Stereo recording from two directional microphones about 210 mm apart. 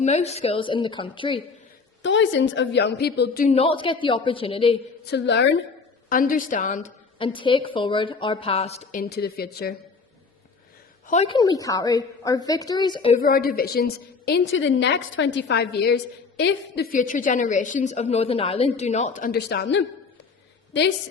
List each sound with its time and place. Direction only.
0.0 s a woman's voice: 30° left (ahead or behind)
2.0 s a woman's voice: 60° left (ahead or behind)
3.5 s a woman's voice: 25° left (ahead or behind)
5.1 s a woman's voice: 55° left (ahead or behind)
6.1 s a woman's voice: 40° left (ahead or behind)
7.2 s a woman's voice: 25° left (ahead or behind); by 9.7 s 45° left (ahead or behind)
11.0 s a woman's voice: 35° left (ahead or behind)
13.1 s a woman's voice: 45° left (ahead or behind)
19.3 s a woman's voice: 50° left (ahead or behind)